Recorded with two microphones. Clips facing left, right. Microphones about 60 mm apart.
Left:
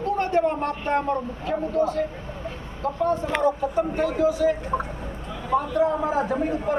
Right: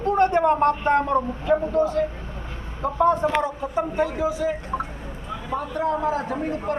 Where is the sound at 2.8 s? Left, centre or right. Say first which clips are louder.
Right 4 dB; centre.